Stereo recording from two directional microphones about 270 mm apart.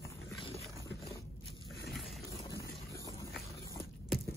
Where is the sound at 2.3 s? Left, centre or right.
Centre.